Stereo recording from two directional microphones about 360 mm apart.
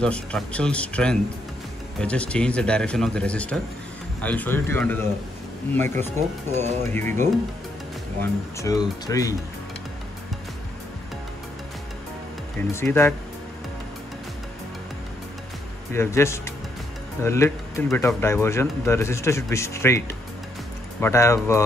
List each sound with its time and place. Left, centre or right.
0.0 s speech: centre
6.1 s speech: centre
6.9 s speech: centre
8.2 s speech: centre
12.5 s speech: centre
15.9 s speech: centre
21.0 s speech: centre